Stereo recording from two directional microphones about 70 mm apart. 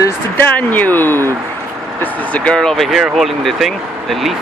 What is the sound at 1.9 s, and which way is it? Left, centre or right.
Speech, centre.